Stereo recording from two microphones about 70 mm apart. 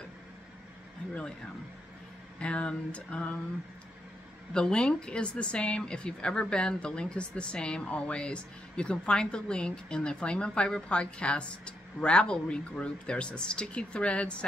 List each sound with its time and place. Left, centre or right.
2.4 s speech: centre
4.6 s speech: centre